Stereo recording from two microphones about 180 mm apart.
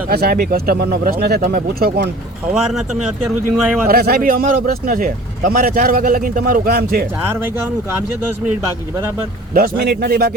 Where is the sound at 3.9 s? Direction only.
55° right (ahead or behind).